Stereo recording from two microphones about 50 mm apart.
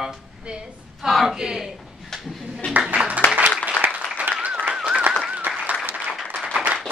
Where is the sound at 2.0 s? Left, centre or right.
Centre.